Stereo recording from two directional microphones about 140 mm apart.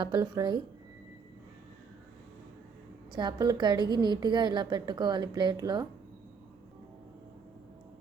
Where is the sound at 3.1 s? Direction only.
30° right (ahead or behind).